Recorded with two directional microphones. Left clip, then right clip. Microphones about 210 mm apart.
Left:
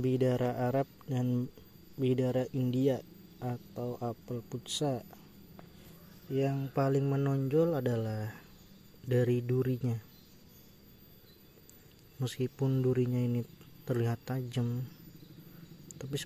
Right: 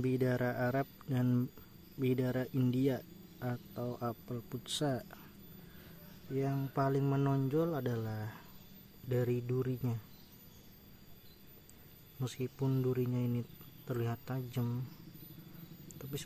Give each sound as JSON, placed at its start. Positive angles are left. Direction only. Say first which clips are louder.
{"t": 0.0, "sound": "speech", "louder": "left 4 dB", "side_deg": 5}
{"t": 6.3, "sound": "speech", "louder": "left 4 dB", "side_deg": 10}
{"t": 12.2, "sound": "speech", "louder": "left 4 dB", "side_deg": 15}
{"t": 15.9, "sound": "a sound", "louder": "left 6 dB", "side_deg": 15}